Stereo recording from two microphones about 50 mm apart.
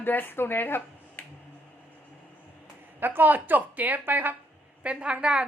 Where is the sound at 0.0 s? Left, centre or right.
Left.